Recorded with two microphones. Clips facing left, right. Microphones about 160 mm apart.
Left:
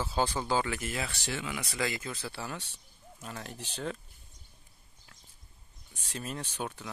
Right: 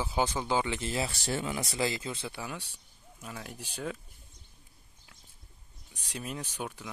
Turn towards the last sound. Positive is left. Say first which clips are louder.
# left 1 dB
turn(degrees=-10)  # may be behind; listen again after turning